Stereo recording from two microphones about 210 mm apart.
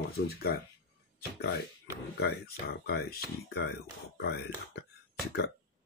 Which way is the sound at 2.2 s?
50° left (ahead or behind).